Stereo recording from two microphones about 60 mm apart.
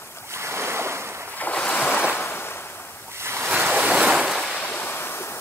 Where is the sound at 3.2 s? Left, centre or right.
Right.